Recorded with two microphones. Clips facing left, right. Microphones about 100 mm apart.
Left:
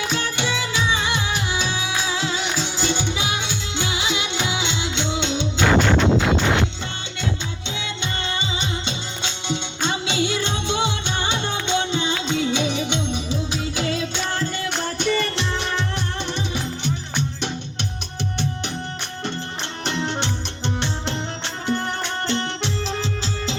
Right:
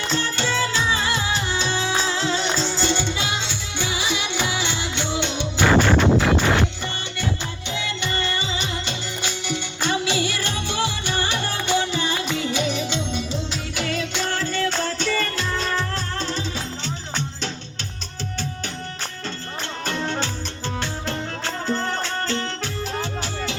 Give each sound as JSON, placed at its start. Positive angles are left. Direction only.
{"t": 0.0, "sound": "music", "side_deg": 10}
{"t": 7.8, "sound": "music", "side_deg": 20}
{"t": 9.5, "sound": "music", "side_deg": 20}
{"t": 16.8, "sound": "music", "side_deg": 15}
{"t": 19.8, "sound": "music", "side_deg": 20}